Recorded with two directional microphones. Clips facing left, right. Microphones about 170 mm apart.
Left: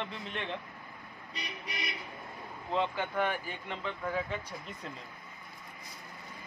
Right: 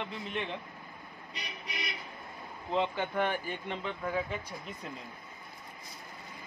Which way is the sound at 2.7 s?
20° right (ahead or behind).